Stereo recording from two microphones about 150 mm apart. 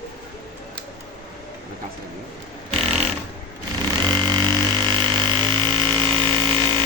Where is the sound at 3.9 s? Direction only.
30° right (ahead or behind).